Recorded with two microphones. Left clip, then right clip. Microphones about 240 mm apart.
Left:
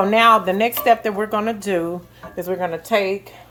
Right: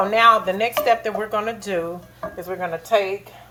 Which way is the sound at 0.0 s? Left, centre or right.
Left.